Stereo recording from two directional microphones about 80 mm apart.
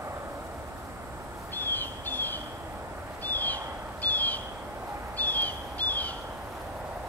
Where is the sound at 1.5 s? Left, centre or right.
Left.